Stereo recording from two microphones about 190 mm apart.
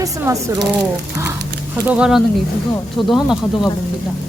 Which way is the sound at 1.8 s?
5° right (ahead or behind).